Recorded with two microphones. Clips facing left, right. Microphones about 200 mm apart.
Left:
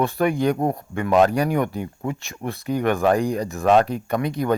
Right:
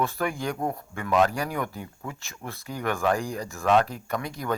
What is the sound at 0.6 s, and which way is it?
Speech, 40° left (ahead or behind).